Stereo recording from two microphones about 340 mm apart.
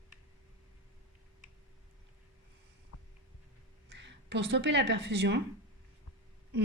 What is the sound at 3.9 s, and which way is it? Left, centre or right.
A woman's voice, right.